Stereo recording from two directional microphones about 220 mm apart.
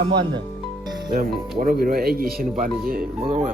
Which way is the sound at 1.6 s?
45° right (ahead or behind).